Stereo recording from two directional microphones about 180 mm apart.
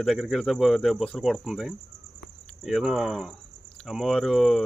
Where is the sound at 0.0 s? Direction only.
Centre (ahead or behind).